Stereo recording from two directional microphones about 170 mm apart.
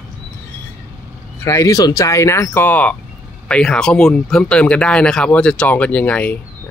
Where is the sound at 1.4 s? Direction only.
20° left (ahead or behind).